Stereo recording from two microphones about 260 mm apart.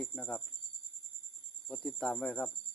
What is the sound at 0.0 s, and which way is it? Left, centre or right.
Speech, centre.